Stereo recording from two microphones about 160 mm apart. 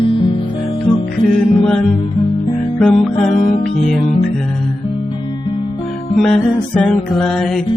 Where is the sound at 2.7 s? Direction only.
5° left (ahead or behind).